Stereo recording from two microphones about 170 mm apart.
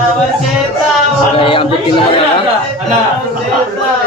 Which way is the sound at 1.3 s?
30° left (ahead or behind).